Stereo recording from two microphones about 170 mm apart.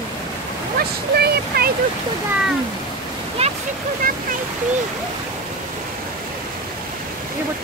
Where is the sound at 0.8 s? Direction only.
65° right (ahead or behind).